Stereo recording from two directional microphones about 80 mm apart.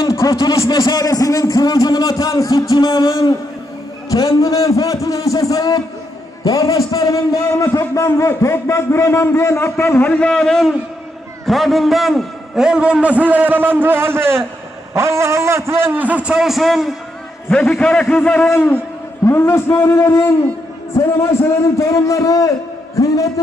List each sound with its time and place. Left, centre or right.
0.0 s a man's voice: left
4.1 s a man's voice: left
10.0 s a man's voice: centre
17.5 s a man's voice: centre; by 18.8 s left
19.2 s a man's voice: left